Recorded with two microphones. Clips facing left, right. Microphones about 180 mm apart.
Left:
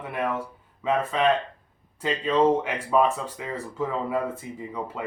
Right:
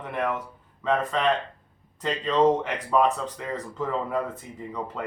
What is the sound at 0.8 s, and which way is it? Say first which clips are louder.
Speech: left 1 dB; 10° left (ahead or behind).